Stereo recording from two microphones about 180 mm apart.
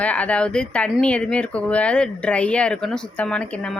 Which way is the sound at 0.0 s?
10° left (ahead or behind).